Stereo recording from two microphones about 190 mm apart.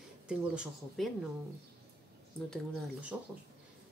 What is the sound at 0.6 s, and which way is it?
Speech, centre (ahead or behind).